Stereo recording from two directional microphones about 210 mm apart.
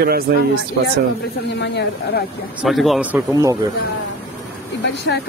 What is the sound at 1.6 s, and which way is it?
Speech, 55° left (ahead or behind).